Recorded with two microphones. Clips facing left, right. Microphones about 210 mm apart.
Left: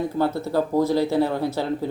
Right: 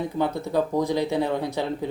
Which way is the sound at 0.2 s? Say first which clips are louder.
Left 1 dB; 5° left (ahead or behind).